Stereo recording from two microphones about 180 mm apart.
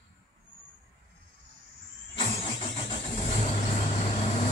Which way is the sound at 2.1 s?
30° left (ahead or behind).